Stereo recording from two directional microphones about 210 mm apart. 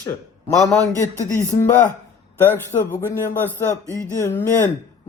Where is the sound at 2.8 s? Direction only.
10° left (ahead or behind).